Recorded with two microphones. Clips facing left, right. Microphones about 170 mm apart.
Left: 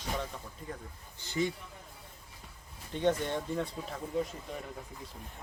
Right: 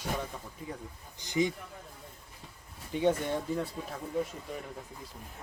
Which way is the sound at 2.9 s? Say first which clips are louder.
Right 2 dB; 10° right (ahead or behind).